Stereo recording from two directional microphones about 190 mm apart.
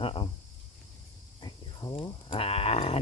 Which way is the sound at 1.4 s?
25° left (ahead or behind).